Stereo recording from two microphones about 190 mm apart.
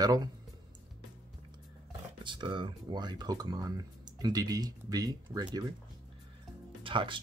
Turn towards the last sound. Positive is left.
turn(degrees=-25)  # may be behind; listen again after turning